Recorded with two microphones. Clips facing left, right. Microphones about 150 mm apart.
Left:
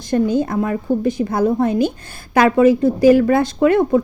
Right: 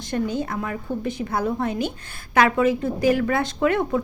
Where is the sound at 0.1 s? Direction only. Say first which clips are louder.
Left 8 dB; 40° left (ahead or behind).